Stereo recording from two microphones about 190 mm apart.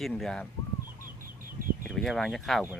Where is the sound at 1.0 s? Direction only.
45° right (ahead or behind).